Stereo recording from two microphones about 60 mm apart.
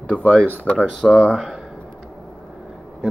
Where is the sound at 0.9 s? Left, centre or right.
Centre.